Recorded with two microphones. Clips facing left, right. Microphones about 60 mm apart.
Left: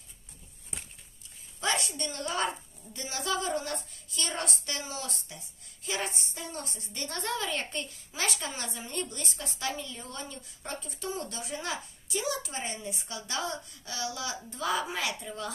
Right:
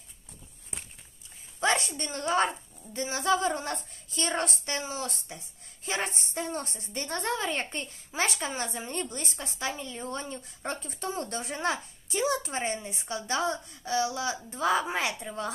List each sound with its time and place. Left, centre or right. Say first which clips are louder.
1.6 s a woman's voice: right 4 dB; right